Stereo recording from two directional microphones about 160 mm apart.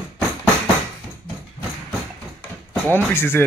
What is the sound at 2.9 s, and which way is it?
Speech, 15° left (ahead or behind).